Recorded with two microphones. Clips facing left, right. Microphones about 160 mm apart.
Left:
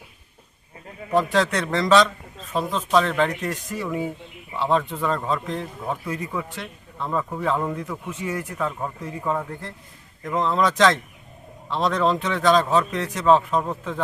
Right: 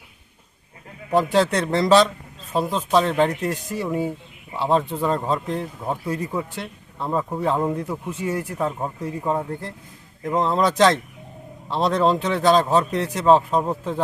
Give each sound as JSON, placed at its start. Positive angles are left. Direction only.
{"t": 1.3, "sound": "speech", "side_deg": -30}